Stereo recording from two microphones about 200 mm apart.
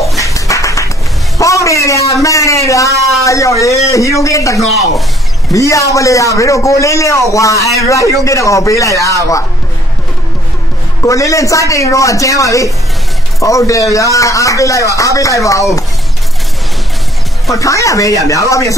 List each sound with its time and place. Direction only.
0.2 s a sound: 15° left (ahead or behind)
1.4 s a man's voice: 15° left (ahead or behind)
11.1 s a man's voice: 15° left (ahead or behind)
17.5 s a man's voice: 15° left (ahead or behind)